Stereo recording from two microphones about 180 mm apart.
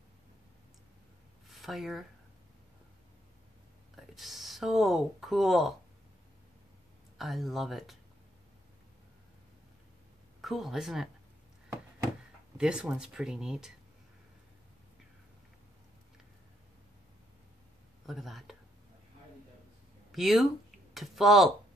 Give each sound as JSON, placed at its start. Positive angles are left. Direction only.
{"t": 1.5, "sound": "speech", "side_deg": 0}
{"t": 3.9, "sound": "speech", "side_deg": 0}
{"t": 7.2, "sound": "speech", "side_deg": 0}
{"t": 10.4, "sound": "speech", "side_deg": 0}
{"t": 12.5, "sound": "speech", "side_deg": -5}
{"t": 18.0, "sound": "speech", "side_deg": 0}
{"t": 20.1, "sound": "speech", "side_deg": 0}